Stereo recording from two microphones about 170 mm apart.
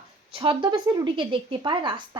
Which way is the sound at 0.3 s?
30° right (ahead or behind).